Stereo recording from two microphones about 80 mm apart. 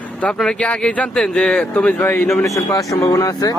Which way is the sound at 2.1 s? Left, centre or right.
Left.